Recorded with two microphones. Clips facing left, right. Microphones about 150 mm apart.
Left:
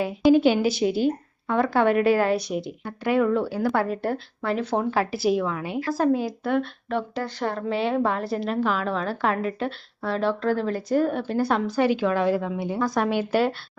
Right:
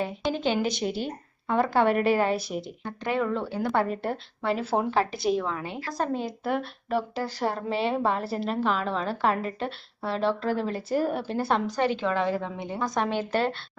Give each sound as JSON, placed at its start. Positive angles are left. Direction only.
{"t": 0.0, "sound": "speech", "side_deg": 5}
{"t": 4.9, "sound": "speech", "side_deg": 5}